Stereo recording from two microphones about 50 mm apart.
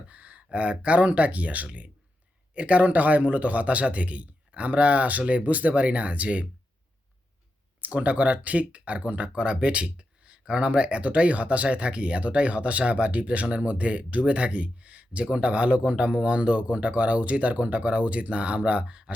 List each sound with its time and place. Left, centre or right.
0.1 s speech: right
7.8 s speech: right